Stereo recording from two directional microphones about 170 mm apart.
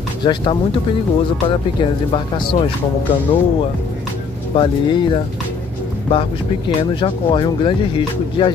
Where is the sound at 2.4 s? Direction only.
30° left (ahead or behind).